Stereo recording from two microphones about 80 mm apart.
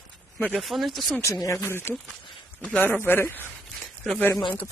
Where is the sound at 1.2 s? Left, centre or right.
Left.